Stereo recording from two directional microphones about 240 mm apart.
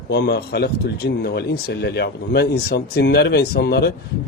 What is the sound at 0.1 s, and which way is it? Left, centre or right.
Speech, left.